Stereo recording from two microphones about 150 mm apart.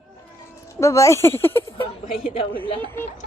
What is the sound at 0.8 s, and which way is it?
Speech, 20° left (ahead or behind).